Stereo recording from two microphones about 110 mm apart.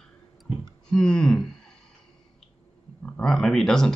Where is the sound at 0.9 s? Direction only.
5° left (ahead or behind).